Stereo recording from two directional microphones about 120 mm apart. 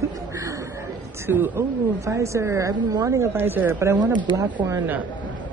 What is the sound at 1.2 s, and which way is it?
A woman's voice, 20° right (ahead or behind).